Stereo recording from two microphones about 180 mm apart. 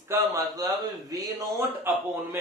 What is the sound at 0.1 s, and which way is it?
Speech, 20° right (ahead or behind).